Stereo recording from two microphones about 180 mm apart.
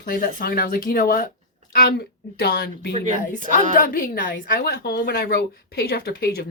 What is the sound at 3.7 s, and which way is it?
Speech, 50° left (ahead or behind).